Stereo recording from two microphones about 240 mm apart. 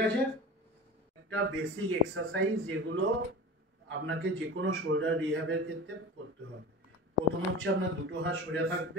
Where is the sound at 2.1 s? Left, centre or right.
Right.